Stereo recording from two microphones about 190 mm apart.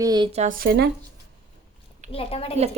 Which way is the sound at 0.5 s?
55° right (ahead or behind).